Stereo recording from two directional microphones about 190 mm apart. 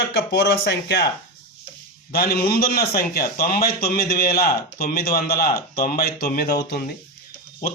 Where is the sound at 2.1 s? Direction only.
55° left (ahead or behind).